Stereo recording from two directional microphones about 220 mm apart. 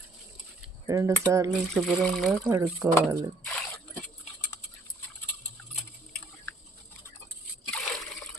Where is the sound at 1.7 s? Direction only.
Centre (ahead or behind).